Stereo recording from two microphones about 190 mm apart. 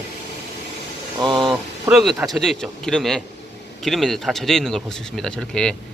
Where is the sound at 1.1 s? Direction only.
25° right (ahead or behind).